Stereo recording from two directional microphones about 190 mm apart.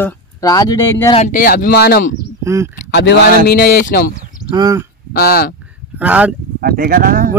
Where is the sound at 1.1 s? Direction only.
40° left (ahead or behind).